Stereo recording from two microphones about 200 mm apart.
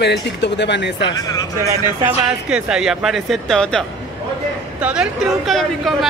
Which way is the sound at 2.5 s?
5° right (ahead or behind).